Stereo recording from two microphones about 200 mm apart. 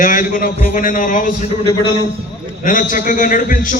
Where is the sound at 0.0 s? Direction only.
40° left (ahead or behind).